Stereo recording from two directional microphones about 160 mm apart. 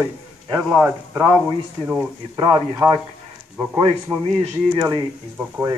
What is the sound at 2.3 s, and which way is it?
Speech, 25° right (ahead or behind).